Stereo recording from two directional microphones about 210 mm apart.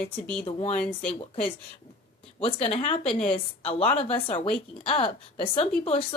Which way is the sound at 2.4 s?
30° left (ahead or behind).